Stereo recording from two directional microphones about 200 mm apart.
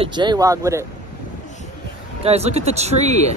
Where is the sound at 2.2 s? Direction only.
30° right (ahead or behind).